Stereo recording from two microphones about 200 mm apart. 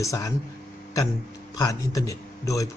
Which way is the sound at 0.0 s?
15° left (ahead or behind).